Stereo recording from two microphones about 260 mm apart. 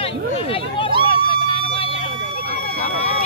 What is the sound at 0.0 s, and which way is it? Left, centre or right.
Hubbub, left.